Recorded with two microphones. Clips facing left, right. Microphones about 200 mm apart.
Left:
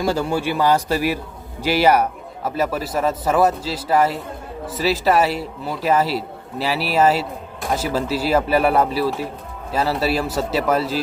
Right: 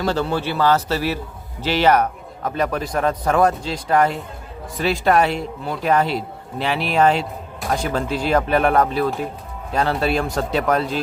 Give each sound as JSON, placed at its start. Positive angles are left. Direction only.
{"t": 0.0, "sound": "a man's voice", "side_deg": 10}